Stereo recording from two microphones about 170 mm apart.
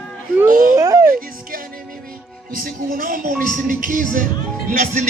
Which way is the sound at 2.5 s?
55° right (ahead or behind).